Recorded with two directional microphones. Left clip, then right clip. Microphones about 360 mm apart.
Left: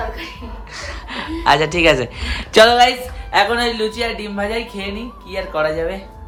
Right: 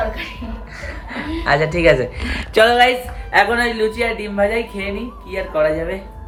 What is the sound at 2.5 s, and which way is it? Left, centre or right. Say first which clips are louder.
Music: left 3 dB; left.